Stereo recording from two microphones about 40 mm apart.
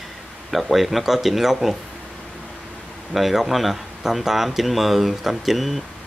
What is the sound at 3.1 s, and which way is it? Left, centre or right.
Speech, centre.